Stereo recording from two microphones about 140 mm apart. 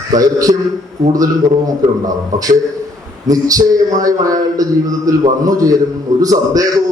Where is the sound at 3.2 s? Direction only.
25° right (ahead or behind).